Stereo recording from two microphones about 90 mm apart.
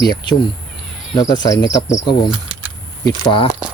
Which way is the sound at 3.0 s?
55° left (ahead or behind).